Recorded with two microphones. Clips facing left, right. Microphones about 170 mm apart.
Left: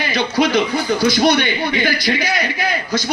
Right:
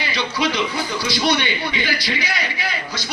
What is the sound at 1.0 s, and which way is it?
A man's voice, 45° left (ahead or behind).